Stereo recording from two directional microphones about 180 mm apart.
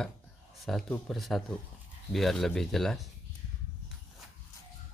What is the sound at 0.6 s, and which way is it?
Speech, centre (ahead or behind).